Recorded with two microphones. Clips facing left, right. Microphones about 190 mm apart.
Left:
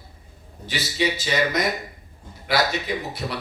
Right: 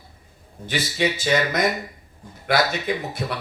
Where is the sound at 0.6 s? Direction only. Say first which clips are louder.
Right 1 dB; 50° right (ahead or behind).